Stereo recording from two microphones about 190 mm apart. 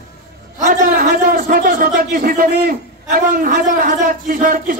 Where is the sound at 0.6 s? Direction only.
45° right (ahead or behind).